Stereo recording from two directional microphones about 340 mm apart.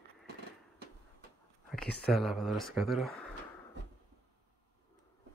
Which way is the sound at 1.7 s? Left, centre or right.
Centre.